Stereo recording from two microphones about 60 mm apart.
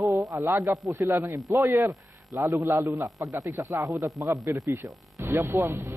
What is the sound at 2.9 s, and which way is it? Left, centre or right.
Speech, right.